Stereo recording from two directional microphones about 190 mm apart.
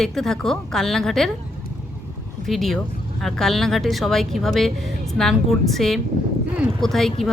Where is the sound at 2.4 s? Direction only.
Centre (ahead or behind).